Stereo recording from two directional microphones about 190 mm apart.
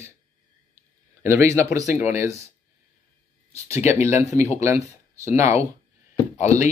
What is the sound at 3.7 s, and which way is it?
Speech, 35° left (ahead or behind).